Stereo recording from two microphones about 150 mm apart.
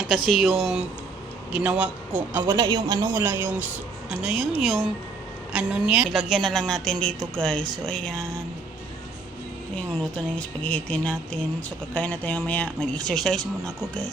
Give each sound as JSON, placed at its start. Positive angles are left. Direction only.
{"t": 0.1, "sound": "speech", "side_deg": 0}
{"t": 2.5, "sound": "speech", "side_deg": -25}
{"t": 9.7, "sound": "speech", "side_deg": 5}